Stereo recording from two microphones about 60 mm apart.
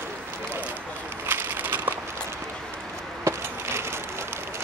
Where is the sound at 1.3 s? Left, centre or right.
Right.